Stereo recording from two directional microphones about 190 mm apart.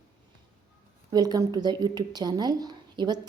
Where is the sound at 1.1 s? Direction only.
20° right (ahead or behind).